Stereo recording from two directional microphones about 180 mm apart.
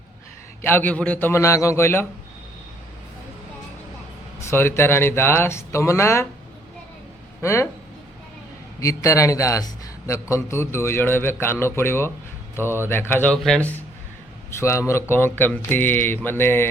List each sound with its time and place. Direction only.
0.6 s a man's voice: 10° left (ahead or behind)
4.4 s a man's voice: 15° left (ahead or behind)
7.4 s a man's voice: 15° left (ahead or behind)
8.8 s a man's voice: 15° left (ahead or behind)